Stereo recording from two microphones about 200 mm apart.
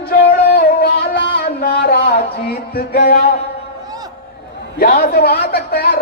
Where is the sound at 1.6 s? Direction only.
50° left (ahead or behind).